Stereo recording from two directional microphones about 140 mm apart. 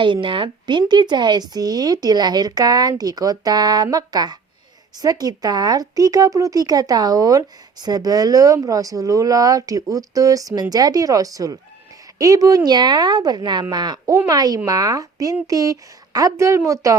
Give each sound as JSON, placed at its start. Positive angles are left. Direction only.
{"t": 0.0, "sound": "speech", "side_deg": -35}